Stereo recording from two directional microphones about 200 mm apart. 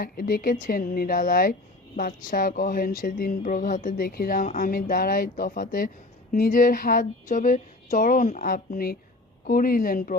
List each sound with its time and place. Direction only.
0.0 s speech: 45° left (ahead or behind)